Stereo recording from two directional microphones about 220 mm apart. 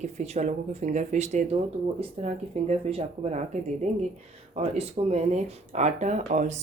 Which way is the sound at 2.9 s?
25° right (ahead or behind).